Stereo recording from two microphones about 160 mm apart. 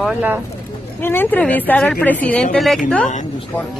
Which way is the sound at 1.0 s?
15° left (ahead or behind).